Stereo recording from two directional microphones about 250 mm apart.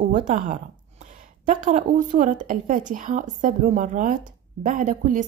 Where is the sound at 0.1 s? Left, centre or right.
Right.